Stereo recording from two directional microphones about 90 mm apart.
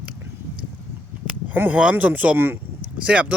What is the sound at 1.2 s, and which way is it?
Speech, 20° right (ahead or behind).